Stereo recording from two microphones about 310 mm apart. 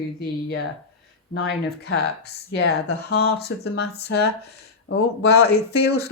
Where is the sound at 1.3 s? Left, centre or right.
Left.